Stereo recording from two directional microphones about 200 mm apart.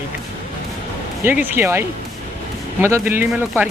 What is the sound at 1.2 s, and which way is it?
Speech, 10° right (ahead or behind).